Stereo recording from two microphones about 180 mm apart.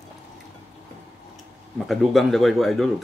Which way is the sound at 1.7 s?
Centre (ahead or behind).